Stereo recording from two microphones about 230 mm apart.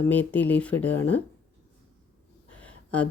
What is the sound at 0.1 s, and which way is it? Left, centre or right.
Speech, centre.